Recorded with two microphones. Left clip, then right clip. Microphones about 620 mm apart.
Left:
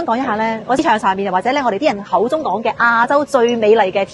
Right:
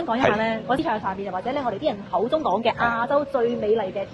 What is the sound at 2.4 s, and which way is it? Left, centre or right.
A woman's voice, left.